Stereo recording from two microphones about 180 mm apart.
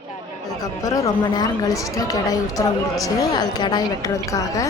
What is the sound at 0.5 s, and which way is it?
Speech, 20° left (ahead or behind).